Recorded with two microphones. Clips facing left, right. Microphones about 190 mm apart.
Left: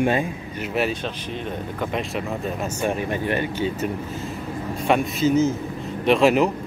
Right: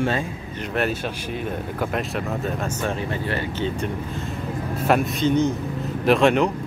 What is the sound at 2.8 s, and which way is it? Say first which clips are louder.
Speech: left 5 dB; 15° left (ahead or behind).